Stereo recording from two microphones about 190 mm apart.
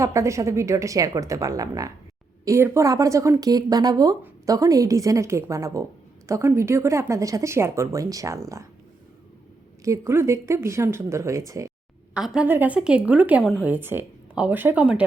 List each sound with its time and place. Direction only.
0.0 s speech: 15° right (ahead or behind)
9.8 s speech: 15° right (ahead or behind)
12.1 s speech: 5° right (ahead or behind)